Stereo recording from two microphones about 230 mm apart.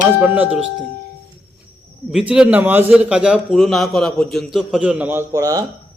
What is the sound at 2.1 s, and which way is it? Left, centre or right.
A man's voice, centre.